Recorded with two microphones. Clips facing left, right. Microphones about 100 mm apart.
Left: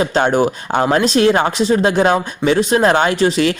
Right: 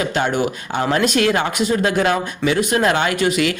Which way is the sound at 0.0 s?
35° left (ahead or behind).